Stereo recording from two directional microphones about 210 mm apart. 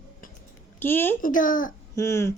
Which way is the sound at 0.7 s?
10° left (ahead or behind).